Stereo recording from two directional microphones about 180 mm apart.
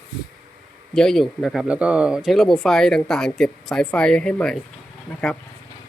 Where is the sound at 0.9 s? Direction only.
Centre (ahead or behind).